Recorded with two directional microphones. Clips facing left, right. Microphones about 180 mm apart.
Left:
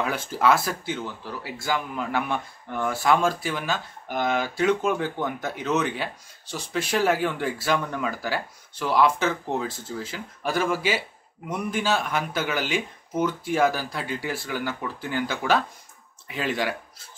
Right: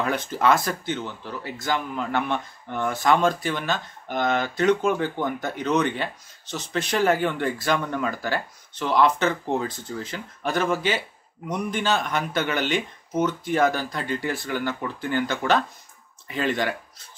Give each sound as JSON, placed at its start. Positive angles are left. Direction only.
{"t": 0.0, "sound": "speech", "side_deg": 5}